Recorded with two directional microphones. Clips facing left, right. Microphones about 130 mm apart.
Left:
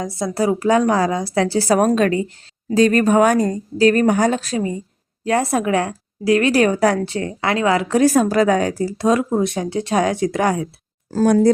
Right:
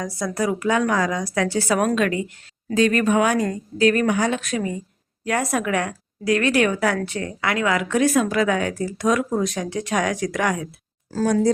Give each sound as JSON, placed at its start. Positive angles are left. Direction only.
{"t": 0.0, "sound": "a woman's voice", "side_deg": 25}
{"t": 11.1, "sound": "speech", "side_deg": 45}